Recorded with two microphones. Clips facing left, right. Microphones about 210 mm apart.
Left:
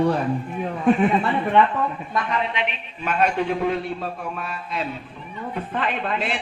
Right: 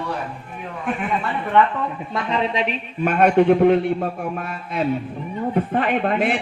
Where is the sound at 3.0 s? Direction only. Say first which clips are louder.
Right 7 dB; 55° right (ahead or behind).